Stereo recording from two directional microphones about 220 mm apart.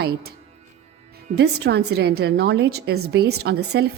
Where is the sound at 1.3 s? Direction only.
50° right (ahead or behind).